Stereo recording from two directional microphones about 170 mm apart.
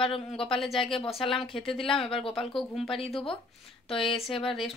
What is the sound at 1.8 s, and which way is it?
Speech, 5° left (ahead or behind).